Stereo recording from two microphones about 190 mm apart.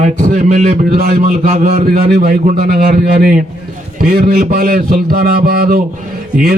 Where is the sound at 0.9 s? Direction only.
55° right (ahead or behind).